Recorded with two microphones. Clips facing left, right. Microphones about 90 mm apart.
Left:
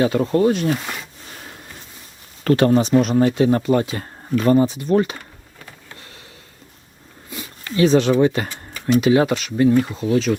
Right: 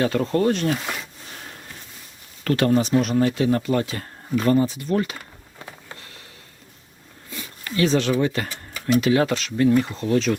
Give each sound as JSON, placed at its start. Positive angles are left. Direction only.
{"t": 0.0, "sound": "speech", "side_deg": 10}
{"t": 2.4, "sound": "speech", "side_deg": 30}
{"t": 7.3, "sound": "a sound", "side_deg": 15}
{"t": 8.4, "sound": "tick-tock", "side_deg": -5}
{"t": 9.0, "sound": "speech", "side_deg": 20}